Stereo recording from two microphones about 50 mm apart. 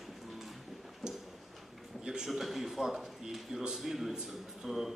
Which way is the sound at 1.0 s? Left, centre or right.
Centre.